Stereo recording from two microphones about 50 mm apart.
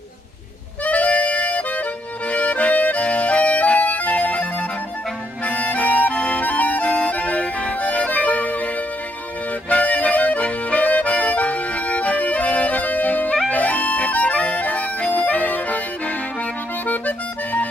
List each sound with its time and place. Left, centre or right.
0.8 s music: left
2.2 s accordion: left
5.4 s music: left
6.1 s music: left
6.4 s accordion: left
9.7 s accordion: left
13.5 s harmonica: left
16.8 s music: left